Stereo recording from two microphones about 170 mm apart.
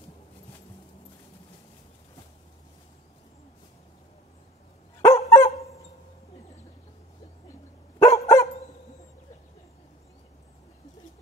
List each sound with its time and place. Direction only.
5.0 s dog: 20° left (ahead or behind)
8.0 s dog: 15° left (ahead or behind)